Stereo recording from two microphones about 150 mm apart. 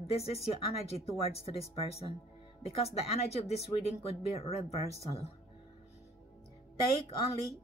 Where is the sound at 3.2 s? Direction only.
45° left (ahead or behind).